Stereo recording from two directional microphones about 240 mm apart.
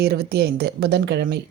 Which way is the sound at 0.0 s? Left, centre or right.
Right.